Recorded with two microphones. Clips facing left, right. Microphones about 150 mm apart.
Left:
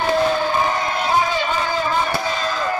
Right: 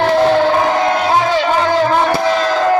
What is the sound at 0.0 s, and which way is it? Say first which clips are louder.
Music: right 7 dB; 70° right (ahead or behind).